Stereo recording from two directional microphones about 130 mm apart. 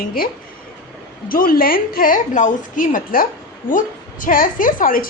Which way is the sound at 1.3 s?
90° left.